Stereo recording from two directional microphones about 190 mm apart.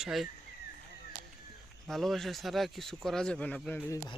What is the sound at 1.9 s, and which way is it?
A man's voice, centre (ahead or behind).